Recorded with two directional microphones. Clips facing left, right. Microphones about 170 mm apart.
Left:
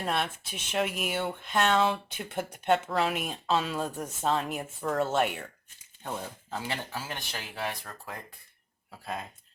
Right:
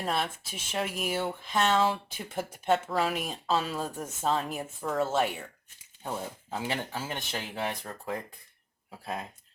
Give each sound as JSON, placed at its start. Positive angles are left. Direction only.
{"t": 0.0, "sound": "speech", "side_deg": 0}
{"t": 6.5, "sound": "speech", "side_deg": -15}